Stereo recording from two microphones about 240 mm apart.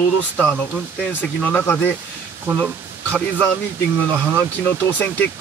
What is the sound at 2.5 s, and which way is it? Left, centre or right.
Speech, centre.